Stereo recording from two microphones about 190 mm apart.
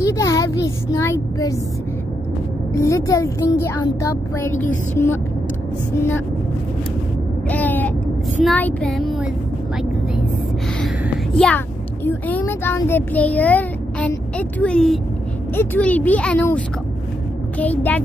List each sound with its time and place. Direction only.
0.0 s a child's voice: 15° left (ahead or behind)
2.7 s speech: 15° left (ahead or behind)
7.4 s a sound: 10° left (ahead or behind)
8.5 s child singing: 5° left (ahead or behind)
11.3 s a child's voice: 5° left (ahead or behind)
14.6 s child singing: 5° left (ahead or behind)
15.5 s speech: 10° left (ahead or behind)